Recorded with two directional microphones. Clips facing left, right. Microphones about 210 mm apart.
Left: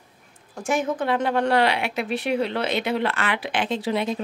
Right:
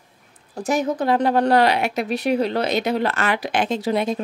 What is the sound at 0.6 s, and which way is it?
A woman's voice, 35° right (ahead or behind).